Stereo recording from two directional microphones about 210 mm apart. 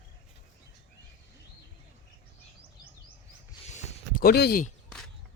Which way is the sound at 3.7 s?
45° left (ahead or behind).